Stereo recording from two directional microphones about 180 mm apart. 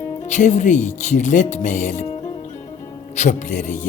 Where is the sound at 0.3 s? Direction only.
40° left (ahead or behind).